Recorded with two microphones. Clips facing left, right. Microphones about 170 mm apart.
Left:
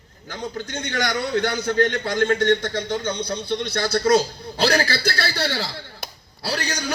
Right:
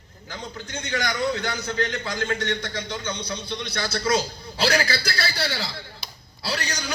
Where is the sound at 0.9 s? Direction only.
45° left (ahead or behind).